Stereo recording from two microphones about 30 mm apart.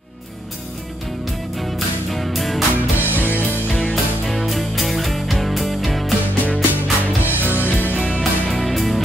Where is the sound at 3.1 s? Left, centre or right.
Left.